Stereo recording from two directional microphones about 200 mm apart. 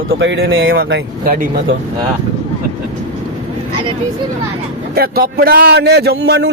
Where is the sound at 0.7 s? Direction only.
50° right (ahead or behind).